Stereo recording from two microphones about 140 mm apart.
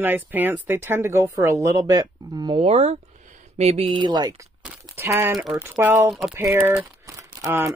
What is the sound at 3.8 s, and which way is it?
Speech, 35° right (ahead or behind).